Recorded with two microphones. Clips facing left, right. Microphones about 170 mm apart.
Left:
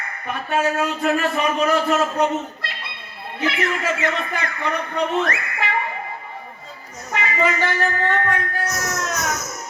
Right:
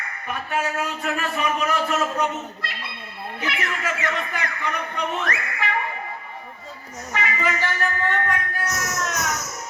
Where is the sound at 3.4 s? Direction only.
25° left (ahead or behind).